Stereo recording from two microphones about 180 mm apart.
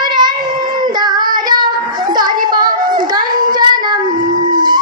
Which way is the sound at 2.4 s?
25° right (ahead or behind).